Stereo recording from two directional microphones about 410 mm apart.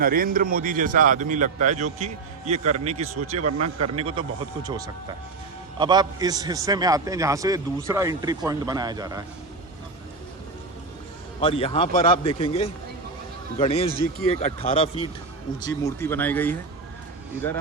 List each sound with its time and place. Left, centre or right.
0.0 s a man's voice: right
3.6 s speech: right
3.9 s a man's voice: centre
11.3 s speech: centre